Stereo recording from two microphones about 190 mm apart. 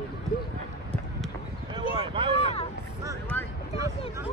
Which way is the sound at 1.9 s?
30° right (ahead or behind).